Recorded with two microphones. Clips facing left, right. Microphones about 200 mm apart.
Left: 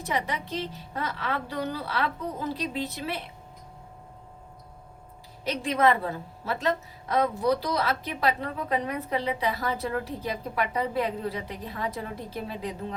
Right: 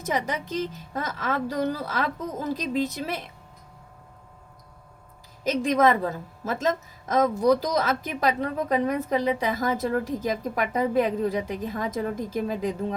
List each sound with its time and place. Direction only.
0.0 s a woman's voice: 45° right (ahead or behind)
5.4 s a woman's voice: 45° right (ahead or behind)